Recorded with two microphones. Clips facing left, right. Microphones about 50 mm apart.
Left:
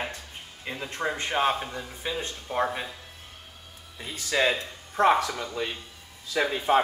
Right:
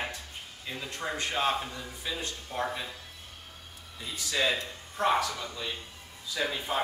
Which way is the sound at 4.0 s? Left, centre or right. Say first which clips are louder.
Left 5 dB; left.